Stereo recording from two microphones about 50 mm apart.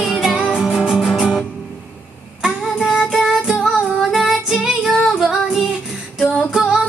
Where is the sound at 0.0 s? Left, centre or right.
Centre.